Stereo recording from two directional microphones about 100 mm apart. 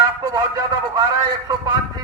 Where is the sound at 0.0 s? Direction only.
35° right (ahead or behind).